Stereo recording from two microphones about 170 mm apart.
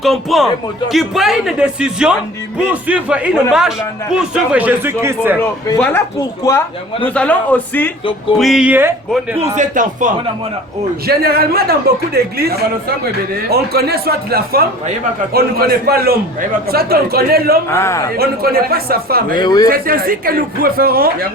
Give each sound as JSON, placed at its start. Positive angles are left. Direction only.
{"t": 0.0, "sound": "a man's voice", "side_deg": 0}
{"t": 5.4, "sound": "a man's voice", "side_deg": 10}
{"t": 7.0, "sound": "a man's voice", "side_deg": 10}
{"t": 8.4, "sound": "a man's voice", "side_deg": 0}
{"t": 9.6, "sound": "a man's voice", "side_deg": -50}
{"t": 11.0, "sound": "speech", "side_deg": -65}
{"t": 17.7, "sound": "a man's voice", "side_deg": 15}
{"t": 18.2, "sound": "speech", "side_deg": -65}
{"t": 19.4, "sound": "speech", "side_deg": 25}
{"t": 19.6, "sound": "speech", "side_deg": -60}